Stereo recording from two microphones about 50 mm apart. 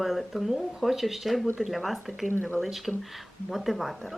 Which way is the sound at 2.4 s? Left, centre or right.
Left.